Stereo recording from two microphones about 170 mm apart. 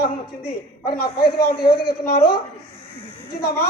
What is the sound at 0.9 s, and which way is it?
Speech, 65° left (ahead or behind).